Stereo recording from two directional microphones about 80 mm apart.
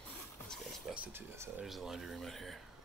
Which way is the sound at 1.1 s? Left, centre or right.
Right.